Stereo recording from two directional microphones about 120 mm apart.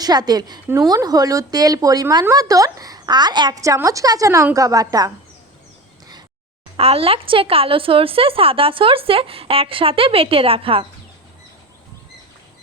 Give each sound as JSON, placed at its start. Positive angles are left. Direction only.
{"t": 0.0, "sound": "speech", "side_deg": -35}
{"t": 3.6, "sound": "a woman's voice", "side_deg": -25}
{"t": 6.7, "sound": "speech", "side_deg": -55}